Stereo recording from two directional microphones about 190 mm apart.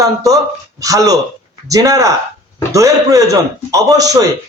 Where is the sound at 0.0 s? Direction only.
20° right (ahead or behind).